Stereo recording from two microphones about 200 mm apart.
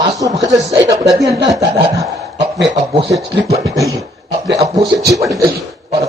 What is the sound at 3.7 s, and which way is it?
Beatboxing, 15° right (ahead or behind).